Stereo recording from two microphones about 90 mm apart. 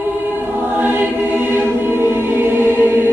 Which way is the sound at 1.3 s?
25° right (ahead or behind).